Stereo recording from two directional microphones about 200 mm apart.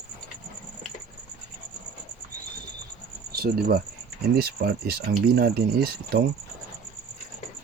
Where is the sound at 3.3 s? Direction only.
50° right (ahead or behind).